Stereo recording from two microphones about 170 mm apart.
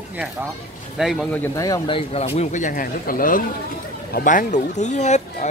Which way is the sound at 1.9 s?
35° left (ahead or behind).